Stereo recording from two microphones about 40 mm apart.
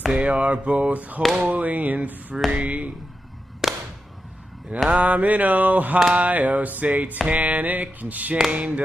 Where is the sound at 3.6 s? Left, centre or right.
Centre.